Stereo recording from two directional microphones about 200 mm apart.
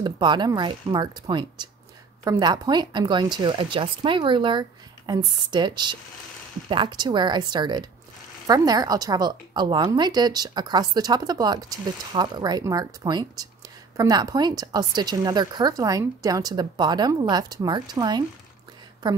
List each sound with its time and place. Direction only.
0.0 s a woman's voice: 20° right (ahead or behind)